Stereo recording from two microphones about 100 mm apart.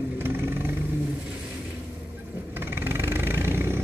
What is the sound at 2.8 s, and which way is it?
Vehicle, 25° right (ahead or behind).